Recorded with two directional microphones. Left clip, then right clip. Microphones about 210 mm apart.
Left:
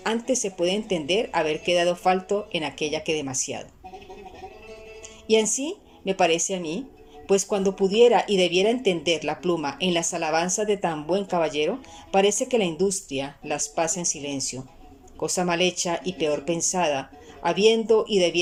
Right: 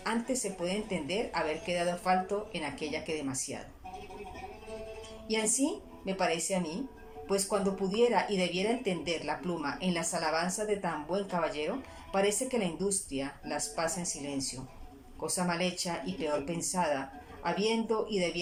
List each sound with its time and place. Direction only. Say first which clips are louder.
0.6 s speech: left 10 dB; 45° left (ahead or behind)
5.3 s speech: left 9 dB; 40° left (ahead or behind)